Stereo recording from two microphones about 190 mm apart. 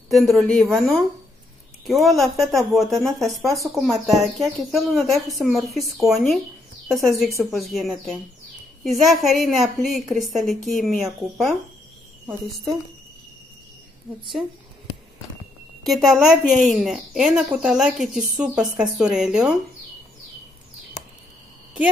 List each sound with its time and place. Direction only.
0.4 s a woman's voice: 5° left (ahead or behind)
15.8 s a woman's voice: centre (ahead or behind)